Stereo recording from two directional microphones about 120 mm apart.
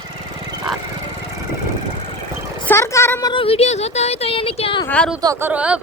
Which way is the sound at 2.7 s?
25° left (ahead or behind).